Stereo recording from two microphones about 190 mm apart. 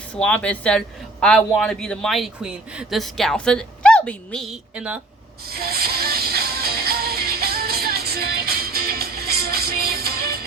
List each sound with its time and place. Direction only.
0.2 s a man's voice: 5° left (ahead or behind)
5.5 s music: 55° right (ahead or behind)